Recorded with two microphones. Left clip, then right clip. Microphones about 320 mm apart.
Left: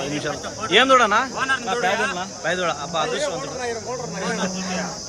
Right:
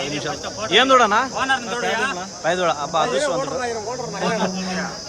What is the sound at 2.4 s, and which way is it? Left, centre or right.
Speech, centre.